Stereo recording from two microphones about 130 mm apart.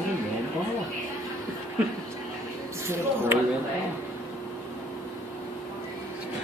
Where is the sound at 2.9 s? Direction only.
20° right (ahead or behind).